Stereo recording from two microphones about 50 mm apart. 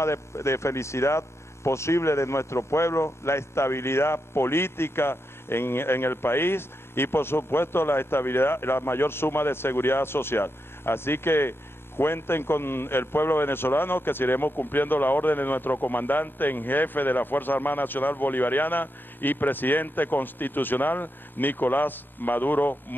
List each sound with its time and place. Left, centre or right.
0.0 s a man's voice: left